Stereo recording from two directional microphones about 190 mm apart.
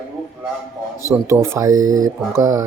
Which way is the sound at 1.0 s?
15° right (ahead or behind).